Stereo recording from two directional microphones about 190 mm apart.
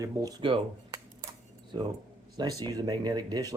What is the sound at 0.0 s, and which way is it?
Speech, 20° right (ahead or behind).